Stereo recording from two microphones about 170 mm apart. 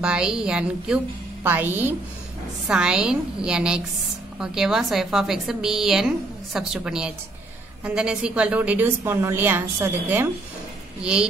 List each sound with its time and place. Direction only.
0.0 s a woman's voice: 5° right (ahead or behind)